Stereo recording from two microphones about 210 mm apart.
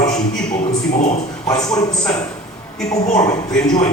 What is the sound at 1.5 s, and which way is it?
Speech, 15° left (ahead or behind).